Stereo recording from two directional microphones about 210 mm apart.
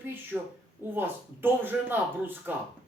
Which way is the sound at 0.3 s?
5° right (ahead or behind).